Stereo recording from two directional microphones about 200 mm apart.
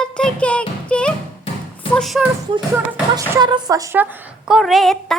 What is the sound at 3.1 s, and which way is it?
A woman's voice, 20° right (ahead or behind).